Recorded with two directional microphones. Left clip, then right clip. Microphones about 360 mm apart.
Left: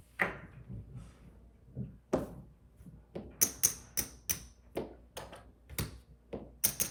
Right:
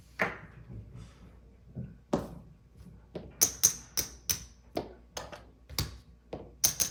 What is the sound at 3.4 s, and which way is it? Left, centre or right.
Tap, centre.